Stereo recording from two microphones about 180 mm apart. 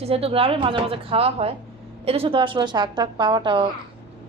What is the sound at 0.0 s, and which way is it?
A woman's voice, 35° right (ahead or behind).